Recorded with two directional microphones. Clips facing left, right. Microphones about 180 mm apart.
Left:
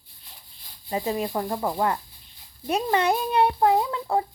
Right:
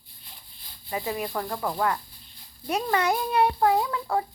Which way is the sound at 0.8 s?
25° left (ahead or behind).